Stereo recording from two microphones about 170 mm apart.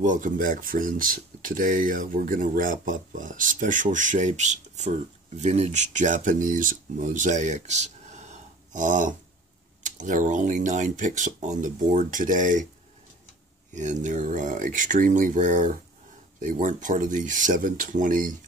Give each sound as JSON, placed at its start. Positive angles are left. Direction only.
{"t": 0.0, "sound": "speech", "side_deg": -50}
{"t": 13.7, "sound": "speech", "side_deg": -45}